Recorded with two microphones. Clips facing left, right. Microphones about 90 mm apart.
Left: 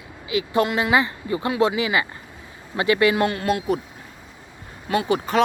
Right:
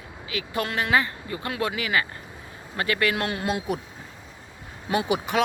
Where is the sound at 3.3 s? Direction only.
15° right (ahead or behind).